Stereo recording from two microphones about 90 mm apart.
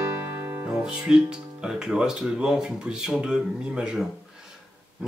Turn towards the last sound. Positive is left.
turn(degrees=-5)  # may be behind; listen again after turning